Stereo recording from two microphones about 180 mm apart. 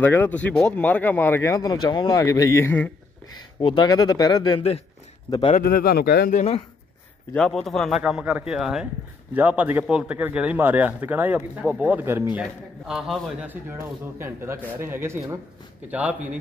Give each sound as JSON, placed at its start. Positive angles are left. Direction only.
{"t": 0.0, "sound": "speech", "side_deg": 10}
{"t": 3.6, "sound": "speech", "side_deg": 25}
{"t": 5.6, "sound": "speech", "side_deg": 55}
{"t": 6.3, "sound": "speech", "side_deg": 35}
{"t": 7.3, "sound": "a man's voice", "side_deg": 0}
{"t": 12.4, "sound": "a man's voice", "side_deg": 0}